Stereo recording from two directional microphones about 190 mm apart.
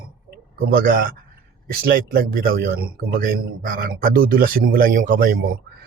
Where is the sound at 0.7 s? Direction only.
50° right (ahead or behind).